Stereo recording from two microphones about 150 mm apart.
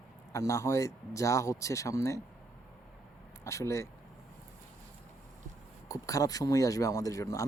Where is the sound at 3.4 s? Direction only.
20° left (ahead or behind).